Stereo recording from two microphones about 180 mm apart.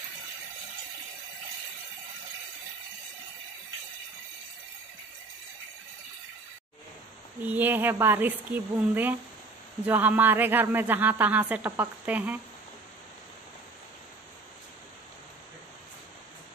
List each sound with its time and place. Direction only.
7.4 s a man's voice: 10° right (ahead or behind)